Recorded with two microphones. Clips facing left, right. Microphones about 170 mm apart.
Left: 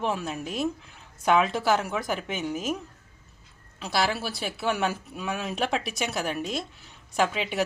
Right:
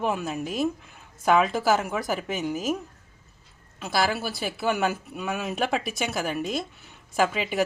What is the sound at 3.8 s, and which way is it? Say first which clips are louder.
Speech: right 1 dB; centre (ahead or behind).